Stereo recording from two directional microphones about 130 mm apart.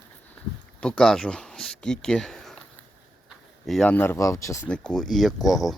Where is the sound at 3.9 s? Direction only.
15° left (ahead or behind).